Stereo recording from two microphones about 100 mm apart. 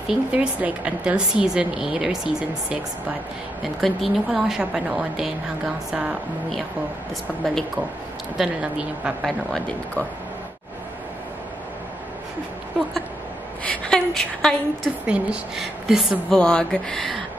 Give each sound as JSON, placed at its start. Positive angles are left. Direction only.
{"t": 0.1, "sound": "a woman's voice", "side_deg": -10}
{"t": 9.5, "sound": "speech", "side_deg": 10}
{"t": 13.7, "sound": "speech", "side_deg": 5}
{"t": 15.0, "sound": "a woman's voice", "side_deg": -10}
{"t": 16.3, "sound": "speech", "side_deg": 10}